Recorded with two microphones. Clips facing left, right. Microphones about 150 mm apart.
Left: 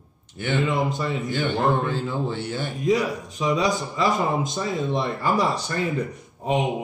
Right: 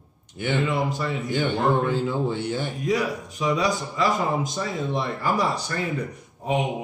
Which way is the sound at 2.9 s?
25° left (ahead or behind).